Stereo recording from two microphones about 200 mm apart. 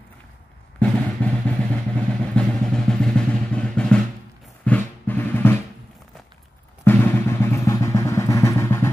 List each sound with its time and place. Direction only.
0.7 s vehicle: 5° left (ahead or behind)
4.6 s drum: 10° left (ahead or behind)
6.8 s drum: 10° left (ahead or behind)